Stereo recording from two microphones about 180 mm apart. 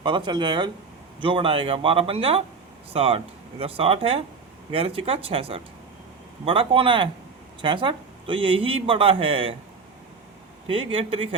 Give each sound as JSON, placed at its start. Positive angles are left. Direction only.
{"t": 0.0, "sound": "speech", "side_deg": -25}
{"t": 10.7, "sound": "speech", "side_deg": -30}